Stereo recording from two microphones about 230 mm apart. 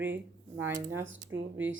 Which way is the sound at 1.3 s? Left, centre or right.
Right.